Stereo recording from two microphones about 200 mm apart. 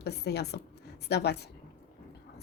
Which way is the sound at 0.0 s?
55° left (ahead or behind).